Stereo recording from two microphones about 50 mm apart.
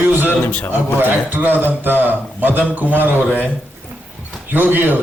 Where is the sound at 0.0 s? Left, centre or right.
Right.